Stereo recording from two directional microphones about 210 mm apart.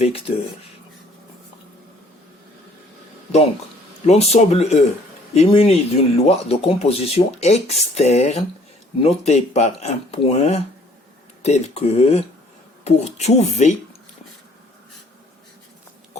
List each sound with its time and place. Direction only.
0.0 s speech: 25° left (ahead or behind)
4.0 s speech: 30° left (ahead or behind)